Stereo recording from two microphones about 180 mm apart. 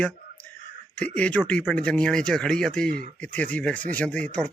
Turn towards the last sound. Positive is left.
turn(degrees=5)  # may be behind; listen again after turning